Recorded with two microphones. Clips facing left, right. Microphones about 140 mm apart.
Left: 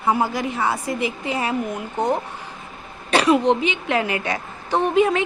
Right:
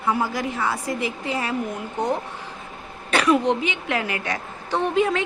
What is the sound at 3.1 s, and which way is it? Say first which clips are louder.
A woman's voice: left 3 dB; 25° left (ahead or behind).